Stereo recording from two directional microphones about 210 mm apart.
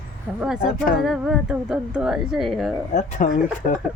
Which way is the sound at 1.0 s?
Centre (ahead or behind).